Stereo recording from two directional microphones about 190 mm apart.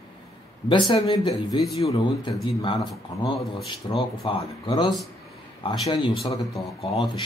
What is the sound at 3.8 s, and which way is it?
Speech, 20° left (ahead or behind).